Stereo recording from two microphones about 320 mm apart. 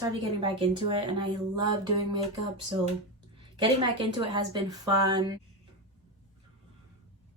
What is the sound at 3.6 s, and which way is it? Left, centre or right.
A woman's voice, centre.